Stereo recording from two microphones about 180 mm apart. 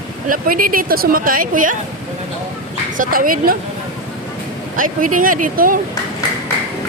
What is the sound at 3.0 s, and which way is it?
Speech, 50° right (ahead or behind).